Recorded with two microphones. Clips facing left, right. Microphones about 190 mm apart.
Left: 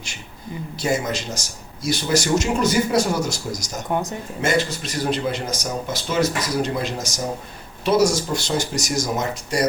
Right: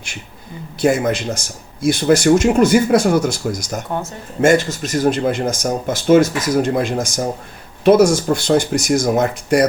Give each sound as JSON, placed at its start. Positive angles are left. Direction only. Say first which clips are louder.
{"t": 0.8, "sound": "speech", "louder": "right 7 dB", "side_deg": -55}
{"t": 3.9, "sound": "speech", "louder": "left 2 dB", "side_deg": 15}
{"t": 4.4, "sound": "speech", "louder": "right 8 dB", "side_deg": -50}